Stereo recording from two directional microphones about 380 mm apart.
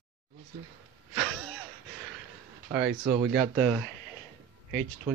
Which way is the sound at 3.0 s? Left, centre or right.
Right.